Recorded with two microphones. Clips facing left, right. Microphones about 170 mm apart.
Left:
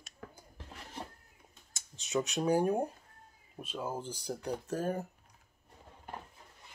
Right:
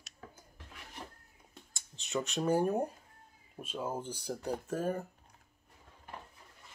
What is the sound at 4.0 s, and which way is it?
Speech, 5° right (ahead or behind).